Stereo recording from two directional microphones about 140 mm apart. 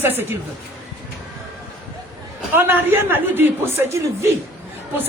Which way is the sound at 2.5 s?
15° right (ahead or behind).